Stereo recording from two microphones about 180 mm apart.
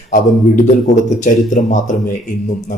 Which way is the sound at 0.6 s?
45° left (ahead or behind).